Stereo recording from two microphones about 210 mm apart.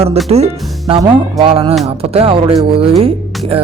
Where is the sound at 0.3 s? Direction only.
30° right (ahead or behind).